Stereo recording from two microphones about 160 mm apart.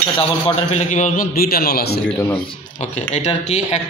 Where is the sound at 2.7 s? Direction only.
45° left (ahead or behind).